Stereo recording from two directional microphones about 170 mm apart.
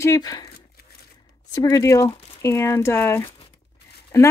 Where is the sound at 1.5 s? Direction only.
20° left (ahead or behind).